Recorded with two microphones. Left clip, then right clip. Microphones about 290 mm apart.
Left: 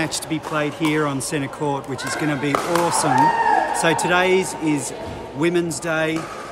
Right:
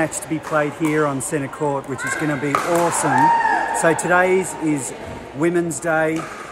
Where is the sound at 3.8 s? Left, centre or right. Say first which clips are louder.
Right 2 dB; centre.